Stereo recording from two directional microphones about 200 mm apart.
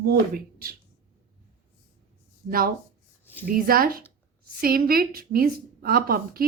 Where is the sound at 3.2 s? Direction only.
10° left (ahead or behind).